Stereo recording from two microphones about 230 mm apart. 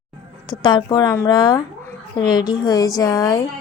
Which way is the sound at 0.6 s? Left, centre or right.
Centre.